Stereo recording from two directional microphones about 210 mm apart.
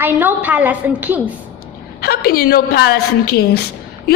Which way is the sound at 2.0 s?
45° left (ahead or behind).